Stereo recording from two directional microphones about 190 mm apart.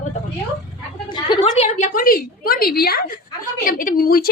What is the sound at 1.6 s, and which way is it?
Speech, 35° left (ahead or behind).